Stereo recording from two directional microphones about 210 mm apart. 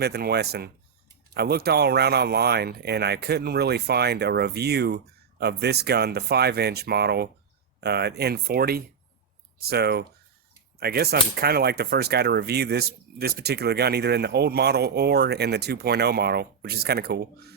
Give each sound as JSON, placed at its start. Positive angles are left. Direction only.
{"t": 0.0, "sound": "speech", "side_deg": -50}